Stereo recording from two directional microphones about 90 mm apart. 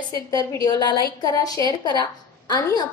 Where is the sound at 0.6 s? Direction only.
55° left (ahead or behind).